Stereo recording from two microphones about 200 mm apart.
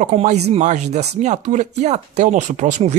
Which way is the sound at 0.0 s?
35° right (ahead or behind).